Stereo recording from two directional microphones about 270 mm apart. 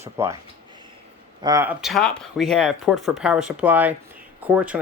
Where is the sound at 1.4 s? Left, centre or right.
Centre.